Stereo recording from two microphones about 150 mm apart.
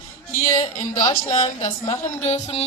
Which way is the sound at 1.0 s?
25° left (ahead or behind).